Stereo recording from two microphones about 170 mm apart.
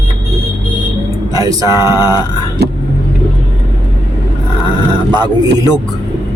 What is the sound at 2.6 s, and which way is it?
Vehicle, 75° right (ahead or behind).